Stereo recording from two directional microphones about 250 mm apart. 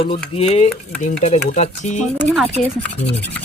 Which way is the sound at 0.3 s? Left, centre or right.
Left.